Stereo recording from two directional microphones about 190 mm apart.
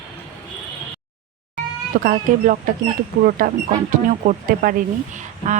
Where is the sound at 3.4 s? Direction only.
45° right (ahead or behind).